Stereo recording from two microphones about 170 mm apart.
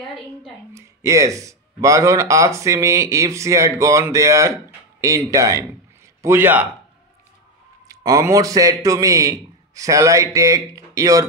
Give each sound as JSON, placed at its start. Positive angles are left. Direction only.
{"t": 0.7, "sound": "a man's voice", "side_deg": -20}
{"t": 7.9, "sound": "a man's voice", "side_deg": -20}